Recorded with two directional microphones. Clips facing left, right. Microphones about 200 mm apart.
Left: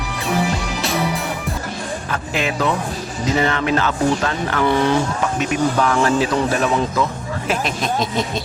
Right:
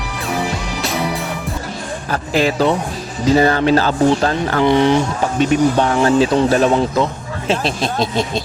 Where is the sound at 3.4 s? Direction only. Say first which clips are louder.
Right 5 dB; 35° right (ahead or behind).